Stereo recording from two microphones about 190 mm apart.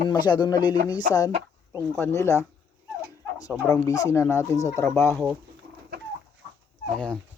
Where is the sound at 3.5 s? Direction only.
15° left (ahead or behind).